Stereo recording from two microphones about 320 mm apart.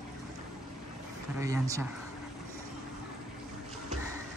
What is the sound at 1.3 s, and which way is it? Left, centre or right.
Speech, centre.